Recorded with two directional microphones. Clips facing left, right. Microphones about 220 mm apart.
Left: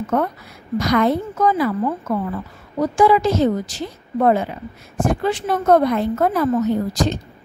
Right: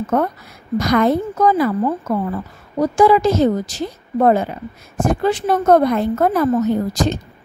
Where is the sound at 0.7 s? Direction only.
45° right (ahead or behind).